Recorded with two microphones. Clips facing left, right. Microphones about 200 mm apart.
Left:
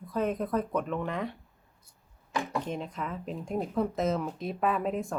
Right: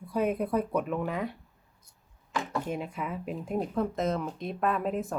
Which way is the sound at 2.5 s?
5° right (ahead or behind).